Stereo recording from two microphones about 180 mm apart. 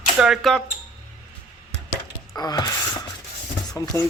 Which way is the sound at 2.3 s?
20° left (ahead or behind).